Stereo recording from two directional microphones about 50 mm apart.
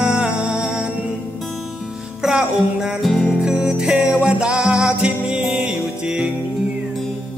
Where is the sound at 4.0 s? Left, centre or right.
Right.